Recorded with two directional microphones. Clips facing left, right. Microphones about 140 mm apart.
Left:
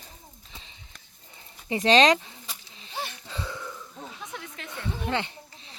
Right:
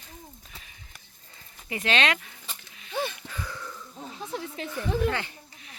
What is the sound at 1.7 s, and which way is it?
Speech, 35° left (ahead or behind).